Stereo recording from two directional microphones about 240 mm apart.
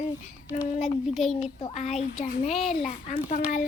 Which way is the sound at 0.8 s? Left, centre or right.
Centre.